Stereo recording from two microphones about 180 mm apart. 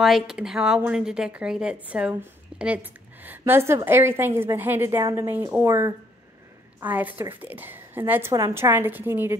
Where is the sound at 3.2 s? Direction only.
10° right (ahead or behind).